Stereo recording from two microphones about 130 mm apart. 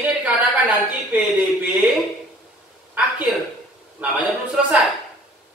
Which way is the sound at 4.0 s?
10° right (ahead or behind).